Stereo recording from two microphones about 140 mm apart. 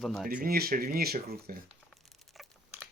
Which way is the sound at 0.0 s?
Centre (ahead or behind).